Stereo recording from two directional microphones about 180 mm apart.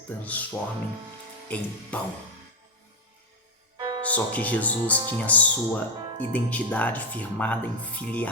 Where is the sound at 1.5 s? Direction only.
10° left (ahead or behind).